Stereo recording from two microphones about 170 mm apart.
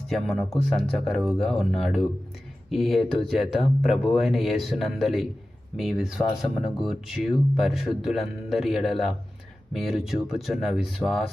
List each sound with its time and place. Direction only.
0.1 s speech: centre (ahead or behind)
2.6 s speech: centre (ahead or behind)
3.0 s speech: 35° left (ahead or behind)
3.5 s speech: centre (ahead or behind)